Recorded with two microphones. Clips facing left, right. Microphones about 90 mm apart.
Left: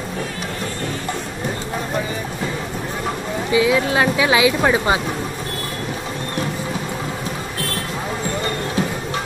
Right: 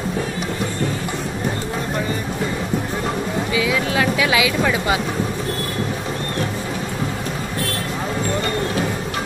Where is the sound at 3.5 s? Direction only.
25° left (ahead or behind).